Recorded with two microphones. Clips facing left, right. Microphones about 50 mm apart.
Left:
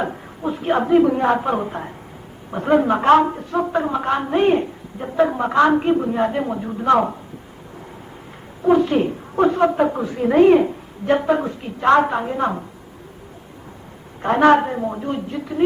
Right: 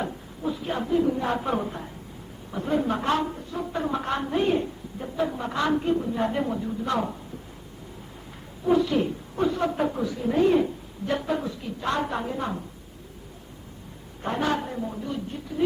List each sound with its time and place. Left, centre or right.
0.0 s a sound: left
0.9 s a man's voice: left
1.2 s speech: left
1.5 s a woman's voice: left
2.5 s a woman's voice: left
3.8 s a woman's voice: left
4.4 s a woman's voice: left
6.3 s a woman's voice: left
6.6 s a woman's voice: left
8.6 s speech: left
10.2 s a woman's voice: left
12.1 s speech: left
14.2 s a woman's voice: left